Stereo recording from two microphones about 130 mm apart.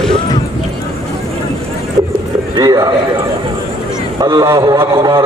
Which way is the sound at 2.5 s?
30° right (ahead or behind).